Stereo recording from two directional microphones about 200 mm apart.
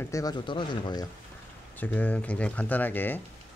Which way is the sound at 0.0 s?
15° left (ahead or behind).